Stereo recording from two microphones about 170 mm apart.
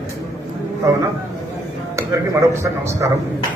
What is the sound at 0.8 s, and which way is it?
Speech, 20° right (ahead or behind).